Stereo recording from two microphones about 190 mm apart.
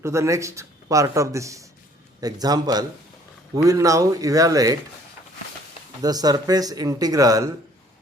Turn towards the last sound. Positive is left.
turn(degrees=-20)  # may be behind; listen again after turning